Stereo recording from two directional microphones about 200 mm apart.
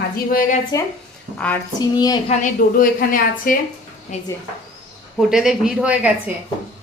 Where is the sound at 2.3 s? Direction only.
40° left (ahead or behind).